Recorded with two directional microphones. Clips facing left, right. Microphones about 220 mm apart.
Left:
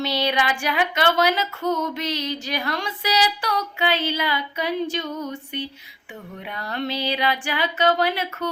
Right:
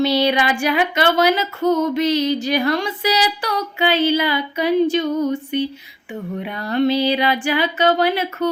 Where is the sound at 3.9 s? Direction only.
5° right (ahead or behind).